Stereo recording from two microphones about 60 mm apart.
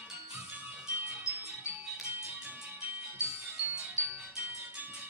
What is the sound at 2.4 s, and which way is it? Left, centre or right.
Music, right.